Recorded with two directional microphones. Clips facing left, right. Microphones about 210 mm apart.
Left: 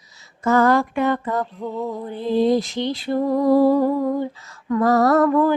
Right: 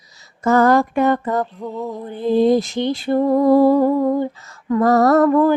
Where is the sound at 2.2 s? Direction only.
50° right (ahead or behind).